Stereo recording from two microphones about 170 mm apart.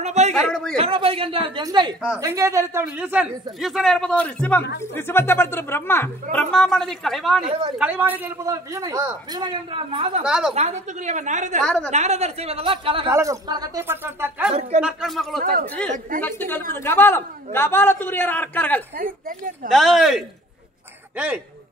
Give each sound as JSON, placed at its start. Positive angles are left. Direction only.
{"t": 0.0, "sound": "speech", "side_deg": -40}
{"t": 0.5, "sound": "speech", "side_deg": 5}
{"t": 0.7, "sound": "a man's voice", "side_deg": -35}
{"t": 6.3, "sound": "speech", "side_deg": 5}
{"t": 7.8, "sound": "a man's voice", "side_deg": -10}
{"t": 10.2, "sound": "speech", "side_deg": -5}
{"t": 10.5, "sound": "a woman's voice", "side_deg": -40}
{"t": 11.6, "sound": "speech", "side_deg": 5}
{"t": 11.9, "sound": "speech", "side_deg": -40}
{"t": 13.1, "sound": "speech", "side_deg": -20}
{"t": 14.5, "sound": "speech", "side_deg": -40}
{"t": 14.8, "sound": "a man's voice", "side_deg": -5}
{"t": 18.9, "sound": "a woman's voice", "side_deg": -55}
{"t": 19.7, "sound": "speech", "side_deg": 0}